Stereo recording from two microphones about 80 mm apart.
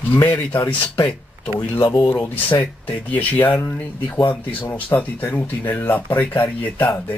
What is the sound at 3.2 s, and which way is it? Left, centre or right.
Speech, left.